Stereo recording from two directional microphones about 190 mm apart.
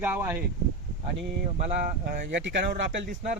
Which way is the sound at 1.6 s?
50° right (ahead or behind).